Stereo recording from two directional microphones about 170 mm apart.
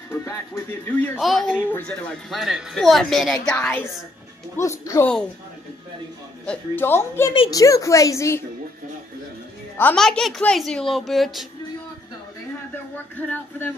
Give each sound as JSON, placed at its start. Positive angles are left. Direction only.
{"t": 0.1, "sound": "speech", "side_deg": 15}
{"t": 1.1, "sound": "a woman's voice", "side_deg": 0}
{"t": 6.4, "sound": "a woman's voice", "side_deg": 10}
{"t": 9.8, "sound": "speech", "side_deg": 5}
{"t": 12.9, "sound": "speech", "side_deg": 10}